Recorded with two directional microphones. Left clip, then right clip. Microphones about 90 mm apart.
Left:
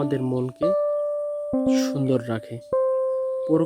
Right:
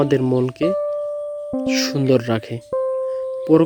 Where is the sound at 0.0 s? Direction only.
30° right (ahead or behind).